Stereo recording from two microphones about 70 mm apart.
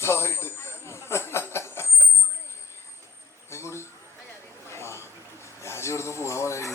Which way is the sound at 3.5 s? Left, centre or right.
Left.